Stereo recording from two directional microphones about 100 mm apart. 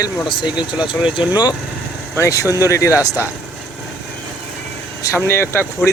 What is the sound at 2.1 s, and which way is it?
Speech, 30° left (ahead or behind).